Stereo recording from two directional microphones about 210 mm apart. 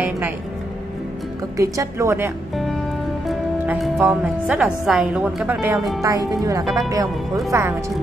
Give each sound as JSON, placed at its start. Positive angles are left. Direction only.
{"t": 1.6, "sound": "speech", "side_deg": -15}
{"t": 3.3, "sound": "a woman's voice", "side_deg": 0}
{"t": 5.8, "sound": "a woman's voice", "side_deg": 0}
{"t": 6.0, "sound": "speech", "side_deg": -15}
{"t": 6.6, "sound": "a woman's voice", "side_deg": 0}
{"t": 7.5, "sound": "speech", "side_deg": -15}